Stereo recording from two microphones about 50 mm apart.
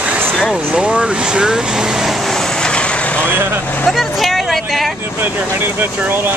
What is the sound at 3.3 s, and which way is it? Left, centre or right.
Speech, right.